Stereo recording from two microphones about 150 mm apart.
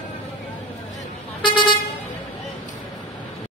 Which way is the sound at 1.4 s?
35° left (ahead or behind).